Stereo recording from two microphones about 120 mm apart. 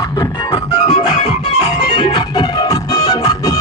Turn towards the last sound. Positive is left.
turn(degrees=30)  # may be behind; listen again after turning